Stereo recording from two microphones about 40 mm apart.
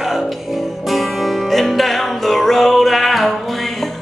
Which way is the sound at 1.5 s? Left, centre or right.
Centre.